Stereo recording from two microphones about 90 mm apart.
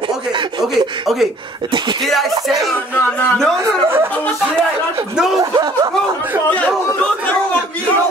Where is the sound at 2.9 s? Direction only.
20° left (ahead or behind).